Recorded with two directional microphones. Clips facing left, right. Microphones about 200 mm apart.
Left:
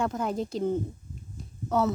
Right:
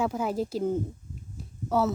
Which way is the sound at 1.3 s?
5° right (ahead or behind).